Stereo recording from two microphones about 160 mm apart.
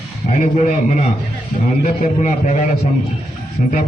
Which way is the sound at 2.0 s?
45° left (ahead or behind).